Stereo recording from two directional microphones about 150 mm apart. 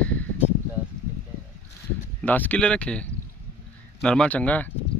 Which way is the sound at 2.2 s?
10° left (ahead or behind).